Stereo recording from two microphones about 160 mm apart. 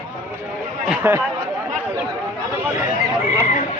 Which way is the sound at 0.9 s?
10° right (ahead or behind).